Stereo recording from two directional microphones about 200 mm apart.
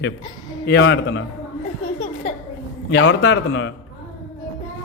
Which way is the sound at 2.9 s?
65° left (ahead or behind).